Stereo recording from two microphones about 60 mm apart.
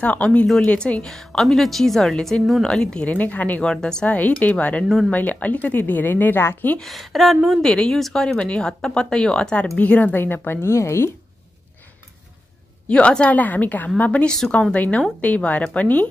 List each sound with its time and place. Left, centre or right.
0.0 s a woman's voice: left
1.0 s a woman's voice: centre
3.1 s a woman's voice: left
3.6 s speech: centre
4.4 s a woman's voice: left
6.8 s a woman's voice: centre
7.6 s speech: centre; by 11.1 s left
12.8 s a woman's voice: left
14.2 s speech: centre
14.7 s a woman's voice: left